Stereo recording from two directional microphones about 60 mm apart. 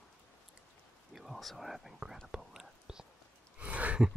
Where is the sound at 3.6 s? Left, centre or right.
Right.